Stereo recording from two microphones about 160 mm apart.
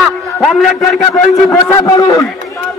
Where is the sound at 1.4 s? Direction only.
20° left (ahead or behind).